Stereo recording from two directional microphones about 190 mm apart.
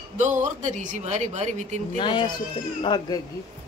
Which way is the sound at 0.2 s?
40° right (ahead or behind).